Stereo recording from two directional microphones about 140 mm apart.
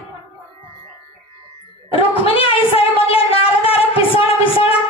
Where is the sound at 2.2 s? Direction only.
40° left (ahead or behind).